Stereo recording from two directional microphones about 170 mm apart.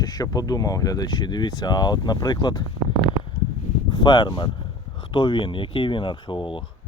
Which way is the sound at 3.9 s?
25° left (ahead or behind).